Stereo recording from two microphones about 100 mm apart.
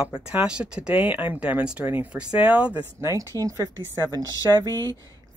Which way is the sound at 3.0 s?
30° right (ahead or behind).